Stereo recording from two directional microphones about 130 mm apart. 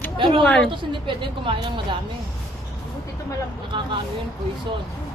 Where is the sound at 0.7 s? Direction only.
40° right (ahead or behind).